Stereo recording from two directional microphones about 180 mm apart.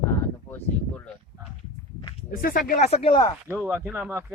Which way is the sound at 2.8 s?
35° left (ahead or behind).